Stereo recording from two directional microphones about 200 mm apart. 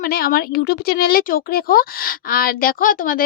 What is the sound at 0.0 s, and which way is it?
Speech, 50° left (ahead or behind).